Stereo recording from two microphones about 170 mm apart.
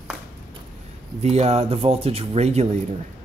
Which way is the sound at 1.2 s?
40° right (ahead or behind).